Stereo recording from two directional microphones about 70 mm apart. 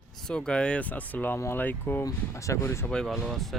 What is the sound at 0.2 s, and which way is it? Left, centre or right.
Speech, centre.